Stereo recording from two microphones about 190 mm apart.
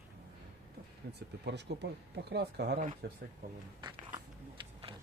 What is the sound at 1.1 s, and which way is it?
Speech, 65° right (ahead or behind).